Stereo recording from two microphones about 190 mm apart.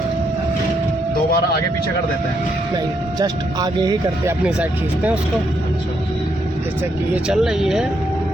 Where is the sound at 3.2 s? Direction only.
20° right (ahead or behind).